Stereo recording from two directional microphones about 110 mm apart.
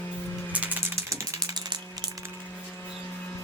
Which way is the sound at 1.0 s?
30° right (ahead or behind).